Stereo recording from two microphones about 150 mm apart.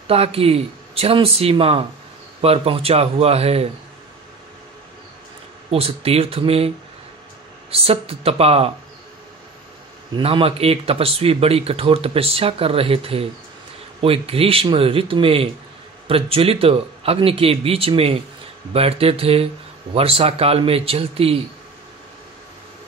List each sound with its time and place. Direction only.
0.1 s speech: 40° right (ahead or behind)
5.7 s speech: 40° right (ahead or behind)
7.7 s speech: 40° right (ahead or behind)
10.1 s speech: 35° right (ahead or behind)